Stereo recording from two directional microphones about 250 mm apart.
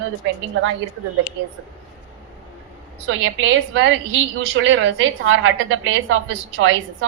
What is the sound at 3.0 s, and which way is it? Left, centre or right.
A woman's voice, right.